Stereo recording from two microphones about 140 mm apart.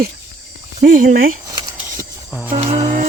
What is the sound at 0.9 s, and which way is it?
Speech, 75° right (ahead or behind).